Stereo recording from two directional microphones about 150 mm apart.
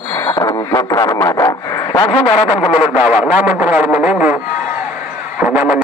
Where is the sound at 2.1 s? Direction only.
40° left (ahead or behind).